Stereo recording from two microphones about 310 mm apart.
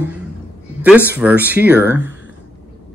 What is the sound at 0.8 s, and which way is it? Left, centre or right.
Speech, centre.